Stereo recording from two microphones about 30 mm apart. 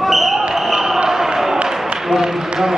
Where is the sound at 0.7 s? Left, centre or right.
Centre.